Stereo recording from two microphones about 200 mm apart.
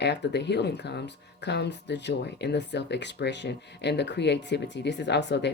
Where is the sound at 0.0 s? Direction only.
60° left (ahead or behind).